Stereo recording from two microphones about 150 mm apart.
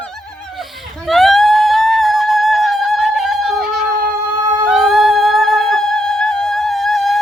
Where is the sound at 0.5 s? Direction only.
Centre (ahead or behind).